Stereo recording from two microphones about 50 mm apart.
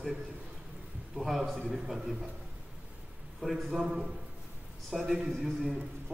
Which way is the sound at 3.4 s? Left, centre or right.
Centre.